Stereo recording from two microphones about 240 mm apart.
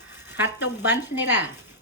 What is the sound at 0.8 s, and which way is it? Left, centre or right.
Speech, centre.